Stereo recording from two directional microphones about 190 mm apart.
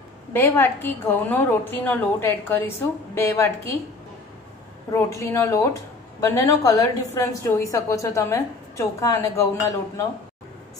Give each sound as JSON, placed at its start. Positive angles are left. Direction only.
{"t": 0.3, "sound": "a woman's voice", "side_deg": 10}
{"t": 4.9, "sound": "a woman's voice", "side_deg": 15}